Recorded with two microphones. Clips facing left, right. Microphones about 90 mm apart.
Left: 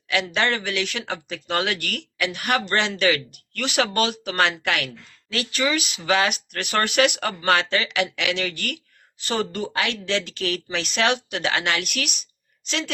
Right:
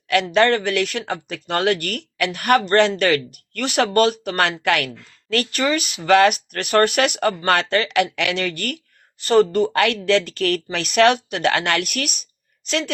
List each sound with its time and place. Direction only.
0.1 s a woman's voice: 50° right (ahead or behind)